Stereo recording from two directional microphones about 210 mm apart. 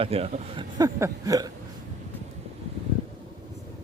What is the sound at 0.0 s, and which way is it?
Speech, 30° right (ahead or behind).